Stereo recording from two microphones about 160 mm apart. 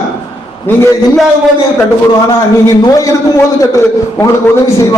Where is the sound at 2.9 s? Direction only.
20° left (ahead or behind).